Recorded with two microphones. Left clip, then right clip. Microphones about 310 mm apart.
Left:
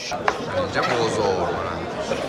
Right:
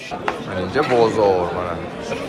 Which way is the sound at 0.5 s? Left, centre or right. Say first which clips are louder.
Right 8 dB; centre.